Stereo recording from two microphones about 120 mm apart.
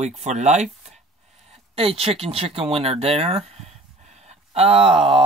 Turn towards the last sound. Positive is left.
turn(degrees=-50)  # may be behind; listen again after turning